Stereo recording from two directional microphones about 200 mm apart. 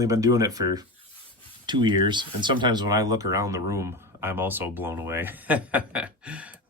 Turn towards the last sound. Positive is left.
turn(degrees=-5)  # may be behind; listen again after turning